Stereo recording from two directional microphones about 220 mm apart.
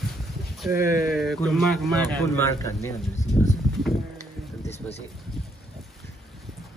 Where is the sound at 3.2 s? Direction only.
35° left (ahead or behind).